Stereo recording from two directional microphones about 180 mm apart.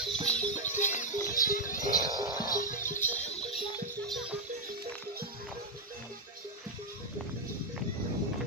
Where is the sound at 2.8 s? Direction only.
15° left (ahead or behind).